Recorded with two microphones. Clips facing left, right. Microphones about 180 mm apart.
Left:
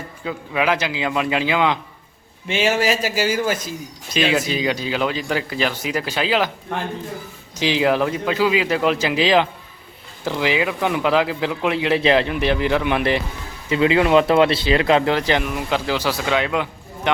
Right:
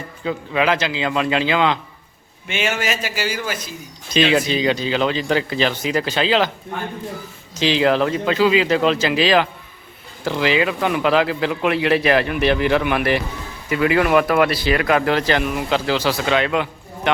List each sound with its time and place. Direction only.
0.3 s speech: 10° left (ahead or behind)
2.5 s a man's voice: 30° left (ahead or behind)
4.1 s speech: 5° left (ahead or behind)
6.7 s a man's voice: 75° left (ahead or behind)
7.5 s speech: 15° left (ahead or behind)